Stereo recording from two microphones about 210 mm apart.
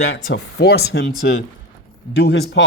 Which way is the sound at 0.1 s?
50° left (ahead or behind).